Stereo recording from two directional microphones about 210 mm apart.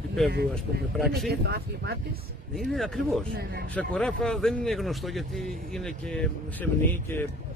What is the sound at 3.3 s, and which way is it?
Speech, 50° right (ahead or behind).